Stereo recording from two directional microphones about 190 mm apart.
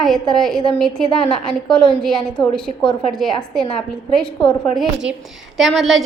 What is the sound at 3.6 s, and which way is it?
Speech, 30° left (ahead or behind).